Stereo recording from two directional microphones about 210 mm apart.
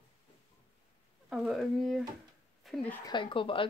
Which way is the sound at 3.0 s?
25° left (ahead or behind).